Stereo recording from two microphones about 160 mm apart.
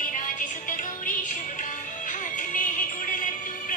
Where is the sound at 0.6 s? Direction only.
55° left (ahead or behind).